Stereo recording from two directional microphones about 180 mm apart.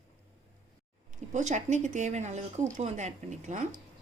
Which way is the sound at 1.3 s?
40° right (ahead or behind).